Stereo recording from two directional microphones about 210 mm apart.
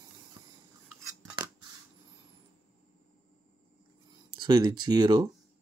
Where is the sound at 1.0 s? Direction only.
15° right (ahead or behind).